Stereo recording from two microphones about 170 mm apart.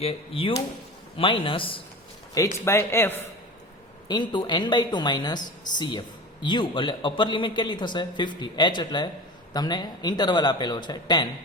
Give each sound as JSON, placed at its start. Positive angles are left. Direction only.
{"t": 0.0, "sound": "a man's voice", "side_deg": 35}
{"t": 2.3, "sound": "speech", "side_deg": 15}
{"t": 4.1, "sound": "speech", "side_deg": 25}